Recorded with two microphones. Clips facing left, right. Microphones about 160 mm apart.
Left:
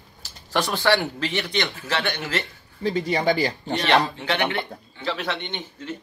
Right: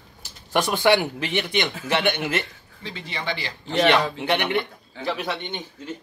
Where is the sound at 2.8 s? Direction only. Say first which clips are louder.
Left 10 dB; 40° left (ahead or behind).